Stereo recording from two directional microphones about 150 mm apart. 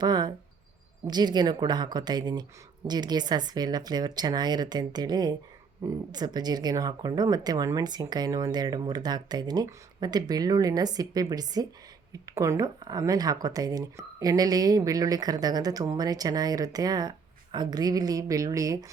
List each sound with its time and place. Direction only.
0.0 s speech: 30° right (ahead or behind)